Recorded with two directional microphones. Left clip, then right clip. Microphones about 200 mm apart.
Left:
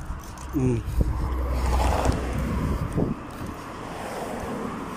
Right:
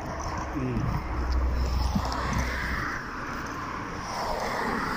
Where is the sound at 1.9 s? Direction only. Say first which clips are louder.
Left 4 dB; 55° left (ahead or behind).